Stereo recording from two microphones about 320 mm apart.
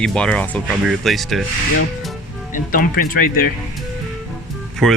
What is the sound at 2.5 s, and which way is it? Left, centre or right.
Speech, left.